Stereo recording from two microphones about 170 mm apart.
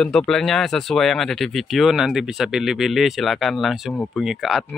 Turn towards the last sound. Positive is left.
turn(degrees=0)  # may be behind; listen again after turning